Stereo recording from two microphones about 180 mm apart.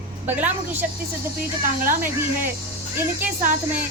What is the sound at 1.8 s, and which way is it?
Speech, 45° right (ahead or behind).